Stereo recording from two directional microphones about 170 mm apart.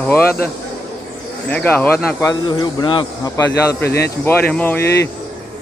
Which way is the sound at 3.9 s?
70° left (ahead or behind).